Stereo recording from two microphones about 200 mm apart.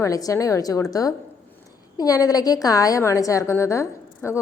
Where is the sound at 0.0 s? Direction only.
15° left (ahead or behind).